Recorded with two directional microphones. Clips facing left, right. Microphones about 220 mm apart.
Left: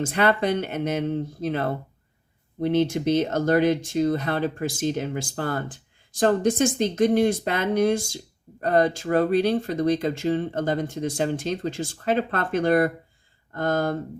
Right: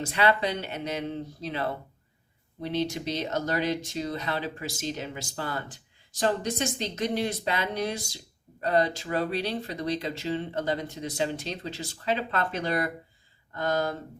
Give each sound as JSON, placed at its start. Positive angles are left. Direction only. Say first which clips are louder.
{"t": 0.0, "sound": "speech", "louder": "left 4 dB", "side_deg": 50}